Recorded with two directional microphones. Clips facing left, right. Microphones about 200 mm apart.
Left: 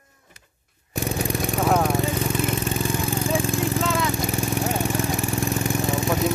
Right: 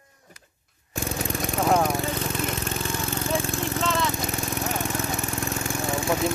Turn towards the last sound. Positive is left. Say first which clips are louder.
# left 2 dB
turn(degrees=20)  # may be behind; listen again after turning